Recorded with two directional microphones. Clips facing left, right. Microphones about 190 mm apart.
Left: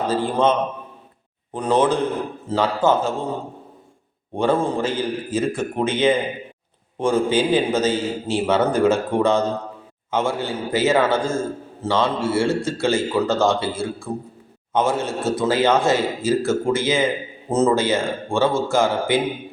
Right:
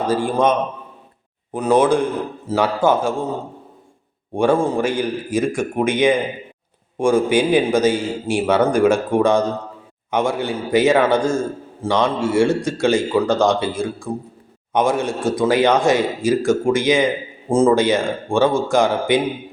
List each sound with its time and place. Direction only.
0.1 s a man's voice: 10° right (ahead or behind)
1.5 s a man's voice: 10° right (ahead or behind)
4.4 s a man's voice: 10° right (ahead or behind)